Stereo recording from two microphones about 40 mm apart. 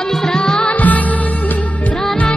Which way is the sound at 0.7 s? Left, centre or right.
Left.